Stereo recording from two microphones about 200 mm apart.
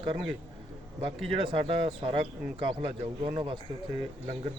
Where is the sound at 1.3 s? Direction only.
25° right (ahead or behind).